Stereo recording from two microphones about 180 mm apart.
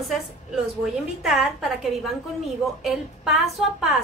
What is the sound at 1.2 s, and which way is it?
A woman's voice, centre (ahead or behind).